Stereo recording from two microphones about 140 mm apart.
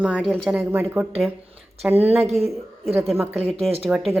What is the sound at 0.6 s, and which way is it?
Speech, 15° right (ahead or behind).